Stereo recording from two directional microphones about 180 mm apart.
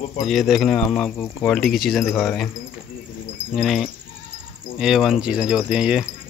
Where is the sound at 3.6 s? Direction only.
Centre (ahead or behind).